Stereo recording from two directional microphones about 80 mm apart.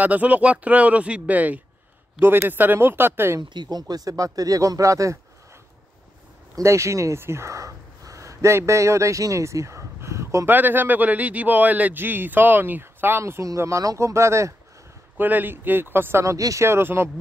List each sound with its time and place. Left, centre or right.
0.0 s speech: centre
3.3 s speech: right
6.5 s speech: right
13.2 s speech: right
15.1 s speech: right